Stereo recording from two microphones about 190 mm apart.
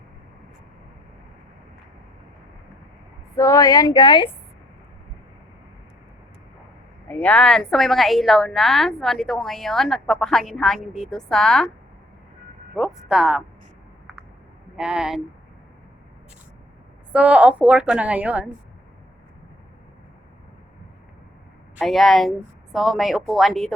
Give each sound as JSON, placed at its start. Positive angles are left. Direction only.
{"t": 3.3, "sound": "speech", "side_deg": 15}
{"t": 7.1, "sound": "a woman's voice", "side_deg": 5}
{"t": 12.7, "sound": "a woman's voice", "side_deg": 0}
{"t": 14.8, "sound": "a woman's voice", "side_deg": -5}
{"t": 17.1, "sound": "a woman's voice", "side_deg": -5}
{"t": 21.8, "sound": "a woman's voice", "side_deg": 0}